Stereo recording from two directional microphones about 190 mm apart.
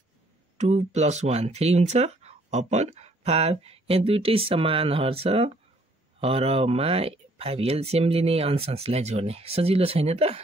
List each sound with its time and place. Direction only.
0.6 s speech: 35° right (ahead or behind)